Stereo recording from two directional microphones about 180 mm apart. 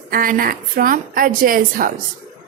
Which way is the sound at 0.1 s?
50° right (ahead or behind).